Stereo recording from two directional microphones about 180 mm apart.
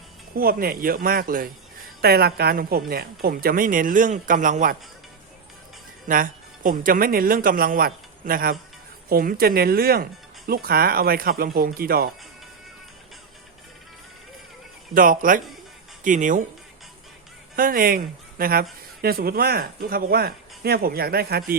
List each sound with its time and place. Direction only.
0.3 s a woman's voice: 55° right (ahead or behind)
6.1 s speech: 50° right (ahead or behind)
14.9 s a woman's voice: 50° right (ahead or behind)
17.6 s a woman's voice: 50° right (ahead or behind)